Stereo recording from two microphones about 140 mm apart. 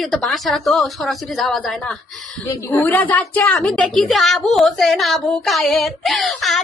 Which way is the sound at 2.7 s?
10° left (ahead or behind).